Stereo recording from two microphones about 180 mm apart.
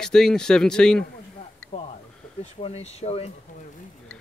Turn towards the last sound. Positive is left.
turn(degrees=35)  # may be behind; listen again after turning